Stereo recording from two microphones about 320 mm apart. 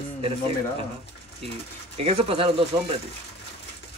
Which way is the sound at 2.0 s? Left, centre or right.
Centre.